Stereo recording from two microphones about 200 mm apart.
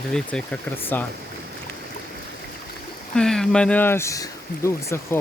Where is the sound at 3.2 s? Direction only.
5° left (ahead or behind).